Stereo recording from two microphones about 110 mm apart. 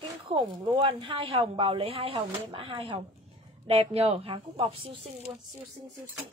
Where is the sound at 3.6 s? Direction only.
65° right (ahead or behind).